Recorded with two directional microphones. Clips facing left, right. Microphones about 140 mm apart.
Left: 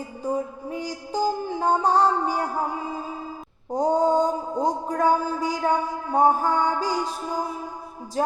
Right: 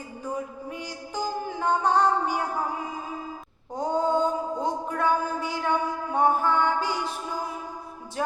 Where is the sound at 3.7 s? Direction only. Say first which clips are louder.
Left 4 dB; 40° left (ahead or behind).